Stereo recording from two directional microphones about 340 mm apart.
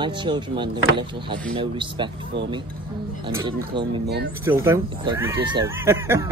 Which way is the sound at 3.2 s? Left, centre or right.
Centre.